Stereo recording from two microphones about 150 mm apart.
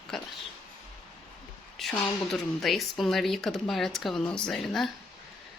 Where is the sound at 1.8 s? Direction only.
Centre (ahead or behind).